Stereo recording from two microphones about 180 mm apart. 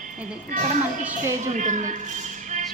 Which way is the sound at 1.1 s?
45° right (ahead or behind).